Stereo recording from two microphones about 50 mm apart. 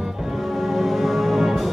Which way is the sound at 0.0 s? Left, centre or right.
Centre.